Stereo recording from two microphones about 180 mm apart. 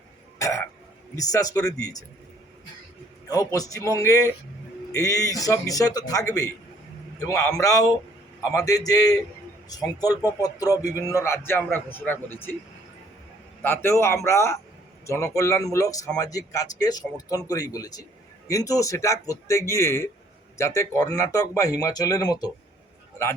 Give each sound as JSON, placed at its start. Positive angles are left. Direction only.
{"t": 0.3, "sound": "cough", "side_deg": 15}
{"t": 1.1, "sound": "speech", "side_deg": 20}
{"t": 3.2, "sound": "speech", "side_deg": 20}
{"t": 13.6, "sound": "speech", "side_deg": 15}